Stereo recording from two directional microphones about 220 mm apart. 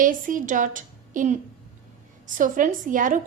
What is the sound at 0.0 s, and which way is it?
A woman's voice, 40° right (ahead or behind).